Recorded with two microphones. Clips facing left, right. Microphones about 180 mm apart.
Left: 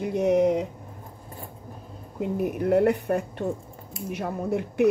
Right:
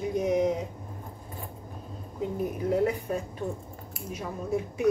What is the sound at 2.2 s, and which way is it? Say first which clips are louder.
A woman's voice: left 4 dB; 65° left (ahead or behind).